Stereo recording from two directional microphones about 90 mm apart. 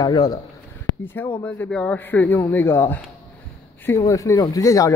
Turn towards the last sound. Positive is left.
turn(degrees=40)  # may be behind; listen again after turning